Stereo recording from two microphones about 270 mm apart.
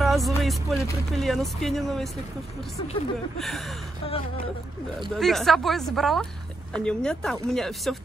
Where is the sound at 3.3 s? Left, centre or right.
Centre.